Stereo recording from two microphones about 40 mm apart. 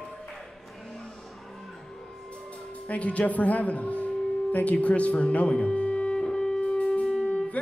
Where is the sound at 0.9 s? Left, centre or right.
Centre.